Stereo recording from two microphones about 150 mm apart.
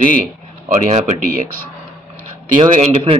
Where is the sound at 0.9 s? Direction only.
55° right (ahead or behind).